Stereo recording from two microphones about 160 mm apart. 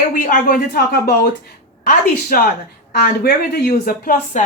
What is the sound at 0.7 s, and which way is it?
Speech, 75° left (ahead or behind).